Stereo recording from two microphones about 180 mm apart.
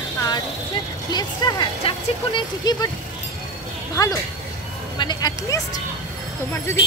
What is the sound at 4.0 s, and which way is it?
Speech, 20° left (ahead or behind).